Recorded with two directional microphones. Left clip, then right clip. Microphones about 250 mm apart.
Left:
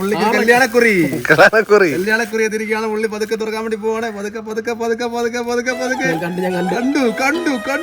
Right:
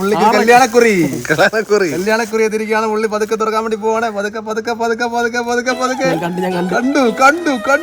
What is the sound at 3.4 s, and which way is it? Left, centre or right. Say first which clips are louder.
Speech: right 5 dB; centre.